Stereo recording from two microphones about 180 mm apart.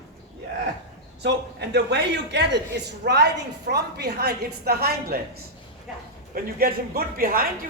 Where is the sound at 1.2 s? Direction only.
75° right (ahead or behind).